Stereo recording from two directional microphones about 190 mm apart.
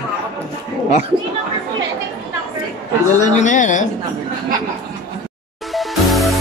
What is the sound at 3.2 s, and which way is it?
Speech, 40° left (ahead or behind).